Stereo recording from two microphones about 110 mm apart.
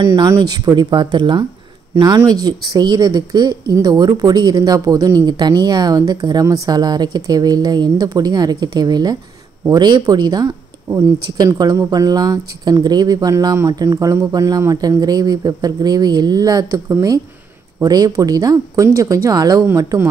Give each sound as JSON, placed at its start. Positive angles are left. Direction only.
{"t": 0.0, "sound": "speech", "side_deg": -40}